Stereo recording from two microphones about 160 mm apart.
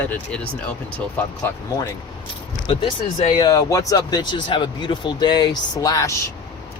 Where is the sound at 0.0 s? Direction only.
10° left (ahead or behind).